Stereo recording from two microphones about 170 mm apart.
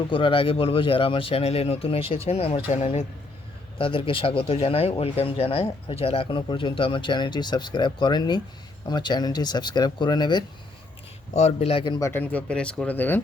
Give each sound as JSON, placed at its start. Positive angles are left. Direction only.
{"t": 0.1, "sound": "speech", "side_deg": 30}
{"t": 3.8, "sound": "speech", "side_deg": 30}
{"t": 11.3, "sound": "speech", "side_deg": 40}